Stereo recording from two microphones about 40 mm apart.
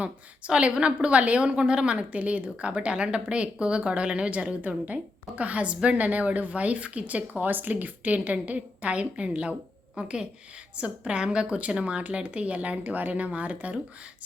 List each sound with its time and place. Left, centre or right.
0.0 s a woman's voice: right
10.0 s a woman's voice: right